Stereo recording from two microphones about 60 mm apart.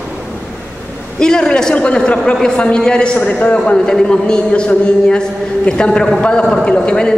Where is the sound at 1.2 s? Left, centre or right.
Centre.